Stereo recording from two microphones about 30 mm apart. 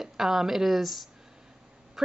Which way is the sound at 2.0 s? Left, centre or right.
Centre.